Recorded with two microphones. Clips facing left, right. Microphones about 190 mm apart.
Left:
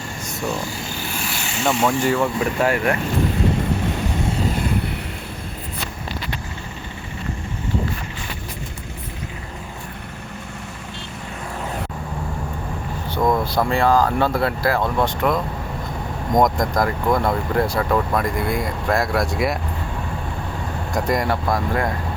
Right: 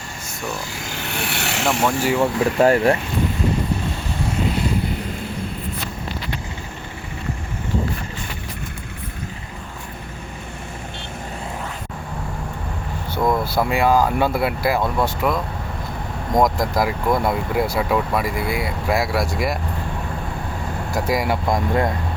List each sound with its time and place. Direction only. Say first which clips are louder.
0.8 s vehicle: right 1 dB; 75° right (ahead or behind)
1.6 s speech: left 1 dB; 5° right (ahead or behind)
2.6 s speech: right 6 dB; 35° right (ahead or behind)
13.1 s speech: left 1 dB; 5° right (ahead or behind)
20.9 s speech: even; 5° right (ahead or behind)
21.4 s speech: right 2 dB; 20° right (ahead or behind)